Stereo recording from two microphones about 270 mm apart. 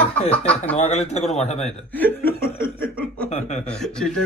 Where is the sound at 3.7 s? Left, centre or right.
Centre.